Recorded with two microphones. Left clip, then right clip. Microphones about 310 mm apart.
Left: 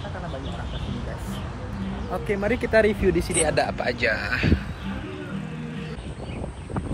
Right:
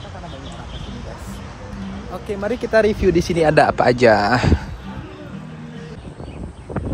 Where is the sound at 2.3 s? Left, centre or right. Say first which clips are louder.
Right 3 dB; centre; by 3.7 s right.